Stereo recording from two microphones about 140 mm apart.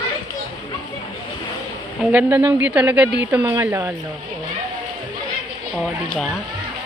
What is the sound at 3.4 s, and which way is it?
Speech, 20° right (ahead or behind).